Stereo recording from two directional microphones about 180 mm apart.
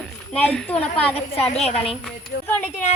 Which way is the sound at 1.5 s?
35° left (ahead or behind).